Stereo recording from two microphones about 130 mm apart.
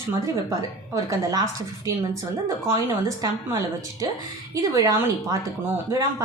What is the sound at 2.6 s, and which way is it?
A woman's voice, 25° right (ahead or behind).